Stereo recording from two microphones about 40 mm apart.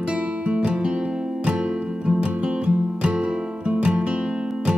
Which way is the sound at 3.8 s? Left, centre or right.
Right.